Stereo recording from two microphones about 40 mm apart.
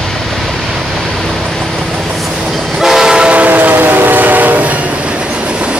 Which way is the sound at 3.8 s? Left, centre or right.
Right.